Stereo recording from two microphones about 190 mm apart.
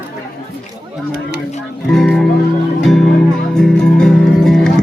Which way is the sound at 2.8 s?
Centre (ahead or behind).